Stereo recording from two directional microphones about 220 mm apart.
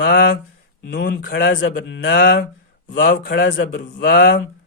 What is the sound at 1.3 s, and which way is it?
A man's voice, 55° left (ahead or behind).